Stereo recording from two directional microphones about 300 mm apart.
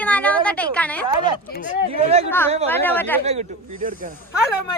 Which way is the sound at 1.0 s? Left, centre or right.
Centre.